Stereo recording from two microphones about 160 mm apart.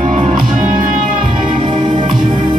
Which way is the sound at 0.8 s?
55° right (ahead or behind).